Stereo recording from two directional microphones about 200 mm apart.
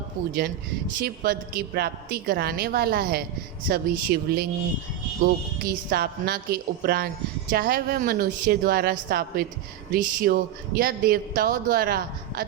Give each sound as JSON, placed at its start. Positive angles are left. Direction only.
{"t": 1.0, "sound": "a woman's voice", "side_deg": -50}